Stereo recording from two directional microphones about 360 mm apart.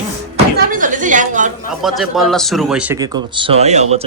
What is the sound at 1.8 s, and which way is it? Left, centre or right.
Speech, centre.